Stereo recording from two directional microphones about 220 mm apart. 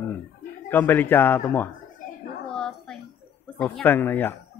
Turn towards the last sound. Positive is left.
turn(degrees=10)  # may be behind; listen again after turning